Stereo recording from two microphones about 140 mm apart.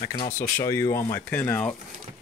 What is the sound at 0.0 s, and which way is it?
Speech, 35° left (ahead or behind).